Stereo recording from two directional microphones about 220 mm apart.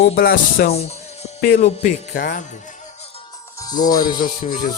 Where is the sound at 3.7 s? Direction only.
20° left (ahead or behind).